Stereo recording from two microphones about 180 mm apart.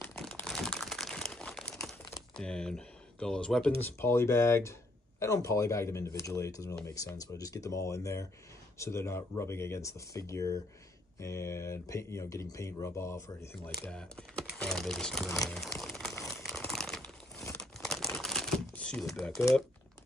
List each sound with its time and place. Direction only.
0.0 s crumpling: 10° left (ahead or behind)
2.3 s speech: 5° left (ahead or behind)
13.8 s speech: 5° left (ahead or behind)
15.4 s crumpling: centre (ahead or behind)